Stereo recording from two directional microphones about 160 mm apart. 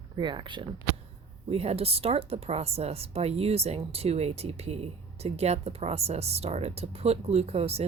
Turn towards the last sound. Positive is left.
turn(degrees=-40)  # may be behind; listen again after turning